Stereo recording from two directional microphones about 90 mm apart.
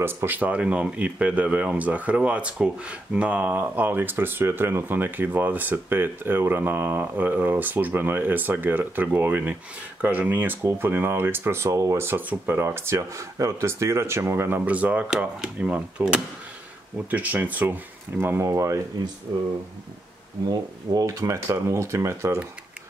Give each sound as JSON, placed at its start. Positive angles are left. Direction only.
{"t": 0.0, "sound": "speech", "side_deg": -20}
{"t": 20.4, "sound": "speech", "side_deg": -40}